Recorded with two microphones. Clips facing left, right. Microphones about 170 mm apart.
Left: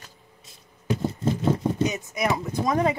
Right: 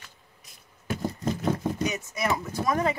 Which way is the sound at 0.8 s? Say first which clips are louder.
Left 4 dB; 25° left (ahead or behind).